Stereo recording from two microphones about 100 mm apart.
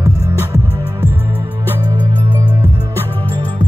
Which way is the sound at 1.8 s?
45° right (ahead or behind).